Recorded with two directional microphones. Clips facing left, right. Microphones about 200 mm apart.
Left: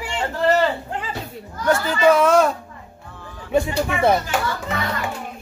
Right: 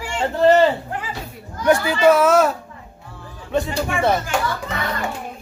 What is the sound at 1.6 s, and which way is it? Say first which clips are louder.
Speech: right 2 dB; 15° right (ahead or behind).